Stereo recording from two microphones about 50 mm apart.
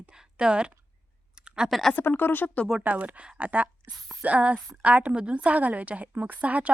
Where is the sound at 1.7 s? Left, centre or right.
Centre.